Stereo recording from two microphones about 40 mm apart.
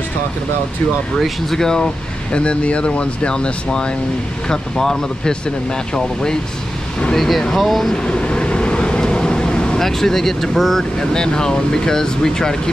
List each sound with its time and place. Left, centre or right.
1.1 s speech: centre
2.3 s speech: left
7.2 s speech: centre
7.9 s vehicle: left
9.8 s speech: centre